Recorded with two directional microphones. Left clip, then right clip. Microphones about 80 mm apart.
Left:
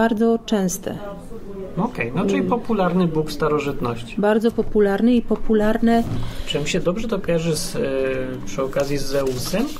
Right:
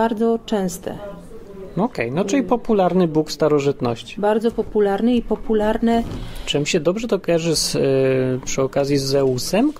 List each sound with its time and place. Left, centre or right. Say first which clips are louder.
0.0 s speech: even; centre
2.0 s speech: even; right
4.2 s speech: even; centre
6.5 s speech: right 3 dB; right